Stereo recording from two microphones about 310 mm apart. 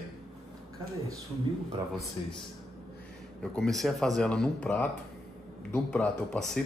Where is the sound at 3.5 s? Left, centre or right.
Centre.